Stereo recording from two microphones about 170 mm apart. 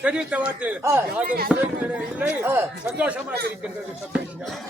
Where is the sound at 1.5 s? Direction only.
Centre (ahead or behind).